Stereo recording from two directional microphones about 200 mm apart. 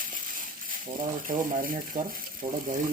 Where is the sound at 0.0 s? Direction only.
45° right (ahead or behind).